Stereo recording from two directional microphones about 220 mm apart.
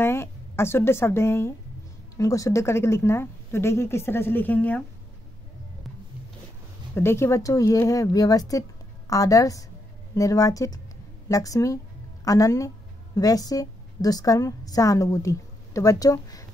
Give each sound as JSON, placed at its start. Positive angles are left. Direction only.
{"t": 0.0, "sound": "a woman's voice", "side_deg": 10}
{"t": 7.0, "sound": "a woman's voice", "side_deg": 10}